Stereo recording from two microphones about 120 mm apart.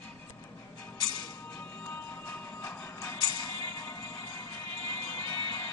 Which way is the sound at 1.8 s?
15° left (ahead or behind).